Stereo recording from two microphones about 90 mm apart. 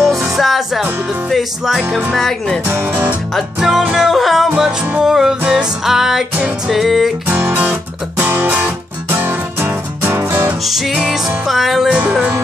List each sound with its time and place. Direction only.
0.1 s music: centre (ahead or behind)
2.7 s music: 20° right (ahead or behind)
3.3 s music: 5° right (ahead or behind)
7.2 s music: 20° right (ahead or behind)
10.6 s music: 5° right (ahead or behind)
11.9 s music: 15° right (ahead or behind)